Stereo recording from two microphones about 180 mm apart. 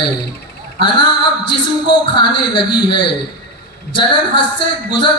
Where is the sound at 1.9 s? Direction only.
25° left (ahead or behind).